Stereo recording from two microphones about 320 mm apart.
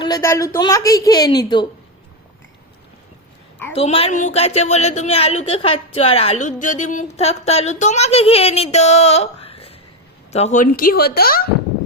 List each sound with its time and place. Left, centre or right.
0.0 s a woman's voice: centre
3.8 s a woman's voice: centre